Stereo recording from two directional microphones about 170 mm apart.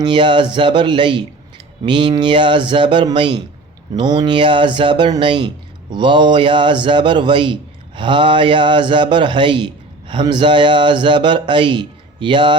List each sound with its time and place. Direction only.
0.0 s a man's voice: 30° right (ahead or behind)